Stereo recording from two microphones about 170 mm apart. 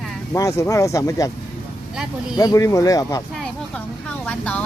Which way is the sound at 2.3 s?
20° left (ahead or behind).